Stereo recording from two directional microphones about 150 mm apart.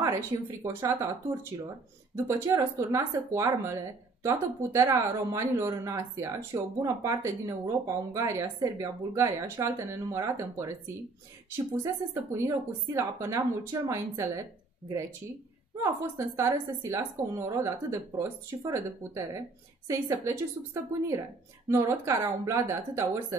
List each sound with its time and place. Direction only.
0.7 s a woman's voice: 20° right (ahead or behind)
2.1 s a woman's voice: 20° right (ahead or behind)
15.8 s a woman's voice: 20° right (ahead or behind)